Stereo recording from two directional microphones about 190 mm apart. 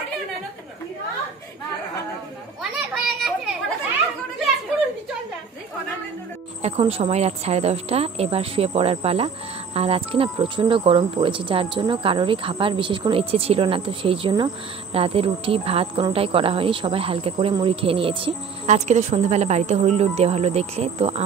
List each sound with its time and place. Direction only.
3.2 s children playing: centre (ahead or behind)
6.6 s speech: 30° right (ahead or behind)